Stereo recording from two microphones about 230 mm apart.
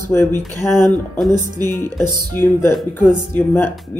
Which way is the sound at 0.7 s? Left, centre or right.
Centre.